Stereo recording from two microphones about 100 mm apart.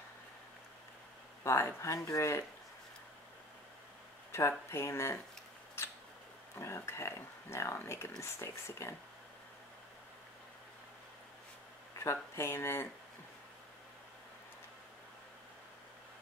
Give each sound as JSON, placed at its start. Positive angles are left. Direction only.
{"t": 1.4, "sound": "speech", "side_deg": 30}
{"t": 4.3, "sound": "speech", "side_deg": 25}
{"t": 6.6, "sound": "speech", "side_deg": 25}
{"t": 12.0, "sound": "speech", "side_deg": 25}